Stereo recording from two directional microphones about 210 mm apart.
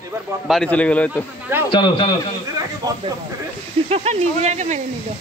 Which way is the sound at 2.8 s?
20° right (ahead or behind).